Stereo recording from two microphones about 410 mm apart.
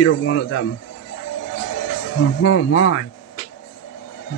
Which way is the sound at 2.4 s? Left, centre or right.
Left.